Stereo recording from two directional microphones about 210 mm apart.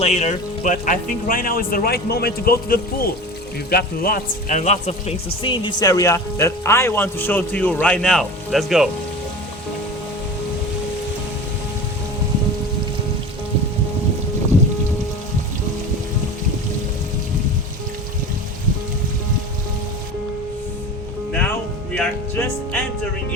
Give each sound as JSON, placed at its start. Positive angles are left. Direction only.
{"t": 0.0, "sound": "a man's voice", "side_deg": 30}
{"t": 21.9, "sound": "music", "side_deg": 10}